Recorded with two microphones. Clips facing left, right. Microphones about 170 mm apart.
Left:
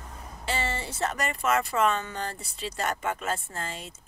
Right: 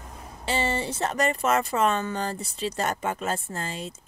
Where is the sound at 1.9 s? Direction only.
40° right (ahead or behind).